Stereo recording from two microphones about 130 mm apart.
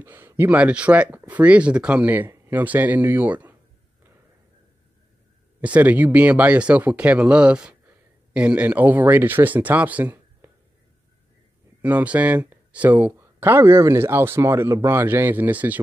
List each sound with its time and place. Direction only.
0.0 s speech: 15° right (ahead or behind)
5.6 s speech: 10° right (ahead or behind)
11.8 s speech: 10° right (ahead or behind)